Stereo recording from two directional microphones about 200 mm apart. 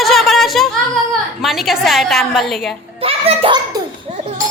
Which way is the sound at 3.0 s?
30° right (ahead or behind).